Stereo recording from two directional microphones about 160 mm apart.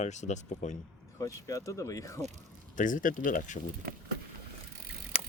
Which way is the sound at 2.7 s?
55° left (ahead or behind).